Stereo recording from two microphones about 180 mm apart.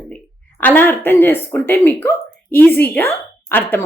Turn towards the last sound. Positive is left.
turn(degrees=10)  # may be behind; listen again after turning